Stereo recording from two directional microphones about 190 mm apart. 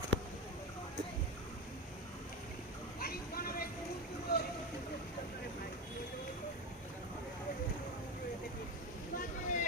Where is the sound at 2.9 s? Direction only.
50° left (ahead or behind).